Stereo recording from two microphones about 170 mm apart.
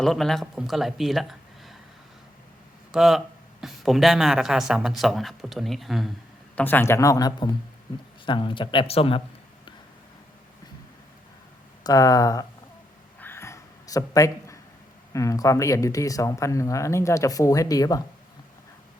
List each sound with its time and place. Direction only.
0.0 s speech: centre (ahead or behind)
2.9 s speech: centre (ahead or behind)
6.6 s speech: 10° left (ahead or behind); by 9.2 s 35° left (ahead or behind)
11.8 s speech: 20° left (ahead or behind)
13.1 s a sound: 10° left (ahead or behind)
15.1 s speech: 20° left (ahead or behind)